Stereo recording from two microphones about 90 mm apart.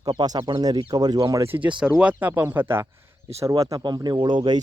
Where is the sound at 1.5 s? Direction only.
20° right (ahead or behind).